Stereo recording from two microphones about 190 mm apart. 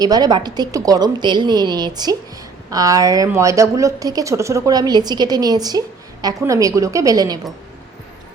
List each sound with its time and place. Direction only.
0.0 s a woman's voice: 20° right (ahead or behind)